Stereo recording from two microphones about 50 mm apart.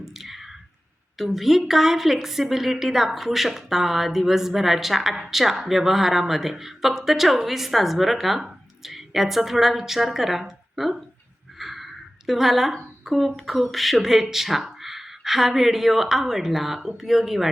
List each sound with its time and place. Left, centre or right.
0.0 s squish: centre
1.2 s a woman's voice: centre